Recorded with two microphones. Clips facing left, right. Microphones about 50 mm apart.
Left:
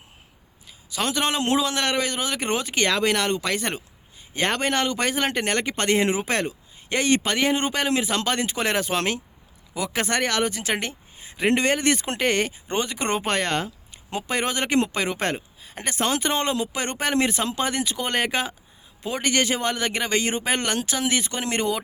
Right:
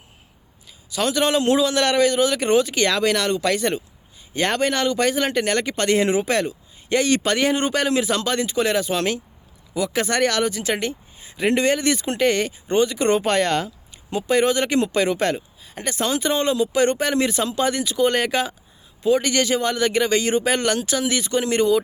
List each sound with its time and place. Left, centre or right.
0.9 s speech: left
8.2 s speech: left
10.1 s speech: left
14.1 s speech: left